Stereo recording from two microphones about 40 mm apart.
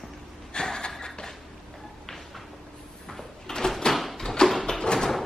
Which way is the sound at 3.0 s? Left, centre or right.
Centre.